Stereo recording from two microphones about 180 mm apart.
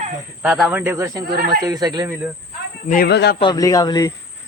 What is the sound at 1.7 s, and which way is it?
Speech, 20° right (ahead or behind).